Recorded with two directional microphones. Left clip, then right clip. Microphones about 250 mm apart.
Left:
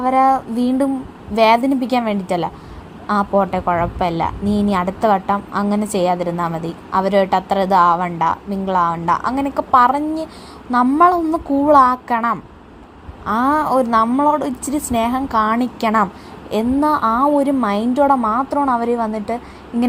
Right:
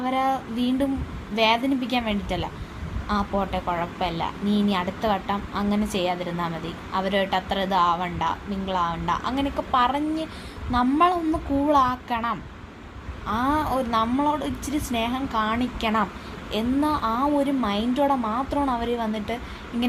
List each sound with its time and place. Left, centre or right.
0.0 s speech: left